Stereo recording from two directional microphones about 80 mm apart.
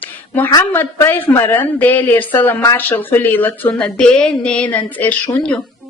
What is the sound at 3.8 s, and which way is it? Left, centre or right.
A woman's voice, centre.